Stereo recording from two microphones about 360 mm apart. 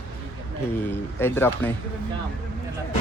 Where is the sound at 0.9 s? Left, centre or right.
Centre.